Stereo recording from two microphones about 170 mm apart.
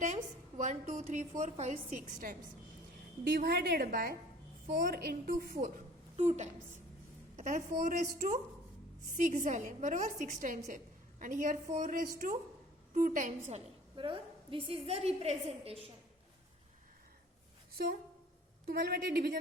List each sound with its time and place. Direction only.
0.0 s a woman's voice: 45° right (ahead or behind)
3.3 s a woman's voice: 65° right (ahead or behind)
6.1 s a woman's voice: 40° right (ahead or behind)
13.9 s a woman's voice: 30° right (ahead or behind)
18.6 s a woman's voice: 65° right (ahead or behind)